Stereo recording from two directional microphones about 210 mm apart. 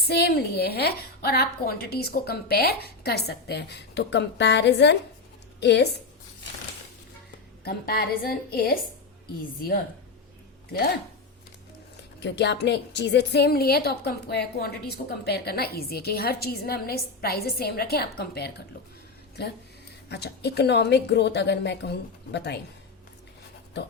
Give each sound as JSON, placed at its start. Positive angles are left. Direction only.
{"t": 0.1, "sound": "a woman's voice", "side_deg": 50}
{"t": 7.6, "sound": "a woman's voice", "side_deg": 45}
{"t": 12.2, "sound": "a woman's voice", "side_deg": 55}
{"t": 20.1, "sound": "a woman's voice", "side_deg": 50}